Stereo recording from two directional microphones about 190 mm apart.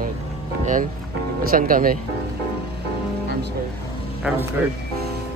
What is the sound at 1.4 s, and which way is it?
Speech, 50° right (ahead or behind).